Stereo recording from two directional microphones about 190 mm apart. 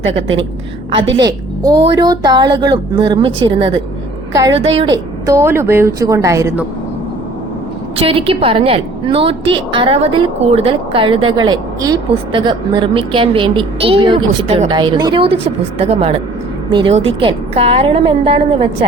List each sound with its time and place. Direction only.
0.2 s a woman's voice: 85° right
1.2 s a woman's voice: 20° right (ahead or behind)
7.9 s a woman's voice: 30° right (ahead or behind)